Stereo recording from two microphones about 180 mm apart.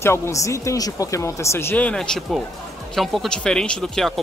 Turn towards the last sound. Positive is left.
turn(degrees=5)  # may be behind; listen again after turning